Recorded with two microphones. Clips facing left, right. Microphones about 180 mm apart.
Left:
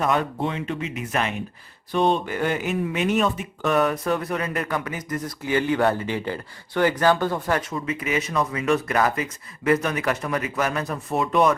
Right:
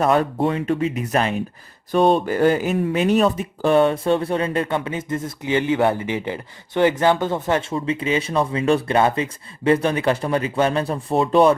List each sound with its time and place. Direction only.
0.0 s speech: 35° right (ahead or behind)